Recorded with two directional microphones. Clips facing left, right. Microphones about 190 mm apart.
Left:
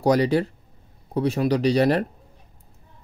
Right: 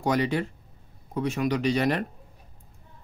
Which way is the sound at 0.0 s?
35° left (ahead or behind).